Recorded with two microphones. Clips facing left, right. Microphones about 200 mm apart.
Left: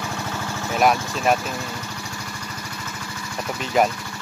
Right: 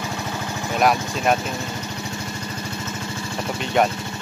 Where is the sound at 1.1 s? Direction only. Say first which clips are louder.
Even; centre (ahead or behind).